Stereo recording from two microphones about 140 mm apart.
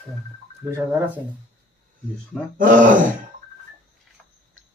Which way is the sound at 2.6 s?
70° right (ahead or behind).